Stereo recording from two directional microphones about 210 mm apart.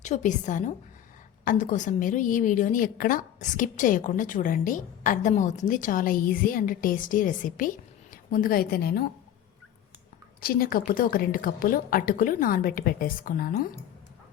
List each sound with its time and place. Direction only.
0.0 s a woman's voice: 35° left (ahead or behind)
10.4 s a woman's voice: 45° left (ahead or behind)